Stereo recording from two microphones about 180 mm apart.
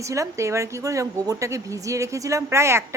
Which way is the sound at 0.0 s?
15° right (ahead or behind).